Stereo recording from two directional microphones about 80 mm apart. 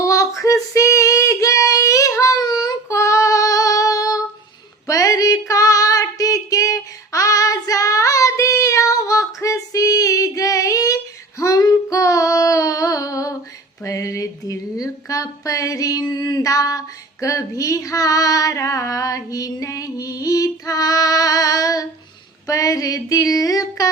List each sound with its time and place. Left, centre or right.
0.0 s female singing: left
2.4 s child singing: left
2.9 s child singing: left
4.9 s female singing: left
11.6 s child singing: left
13.8 s a sound: left